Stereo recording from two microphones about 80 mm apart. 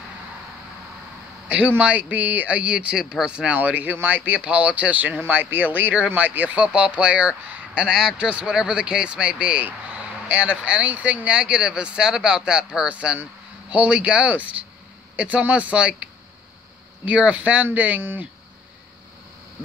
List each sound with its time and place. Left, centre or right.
1.8 s speech: centre